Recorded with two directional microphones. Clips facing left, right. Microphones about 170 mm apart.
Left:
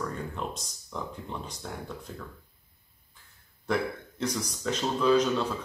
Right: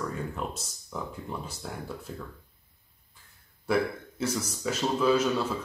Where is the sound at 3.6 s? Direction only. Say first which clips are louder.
Right 2 dB; 5° right (ahead or behind).